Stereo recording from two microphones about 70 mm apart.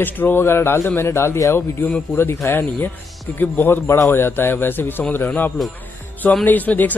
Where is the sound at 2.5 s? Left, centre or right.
Left.